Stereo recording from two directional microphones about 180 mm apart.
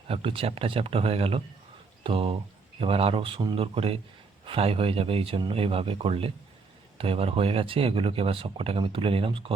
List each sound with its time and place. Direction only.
0.1 s speech: 30° right (ahead or behind)